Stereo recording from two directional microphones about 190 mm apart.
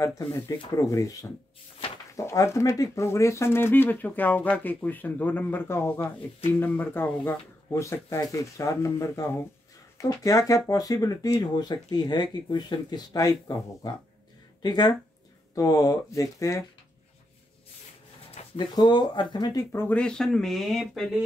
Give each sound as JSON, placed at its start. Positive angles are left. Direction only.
{"t": 0.2, "sound": "speech", "side_deg": 15}
{"t": 18.3, "sound": "speech", "side_deg": 25}